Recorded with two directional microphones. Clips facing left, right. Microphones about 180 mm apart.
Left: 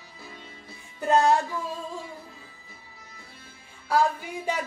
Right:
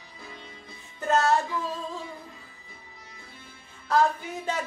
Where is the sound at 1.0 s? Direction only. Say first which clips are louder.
Left 2 dB; 15° left (ahead or behind).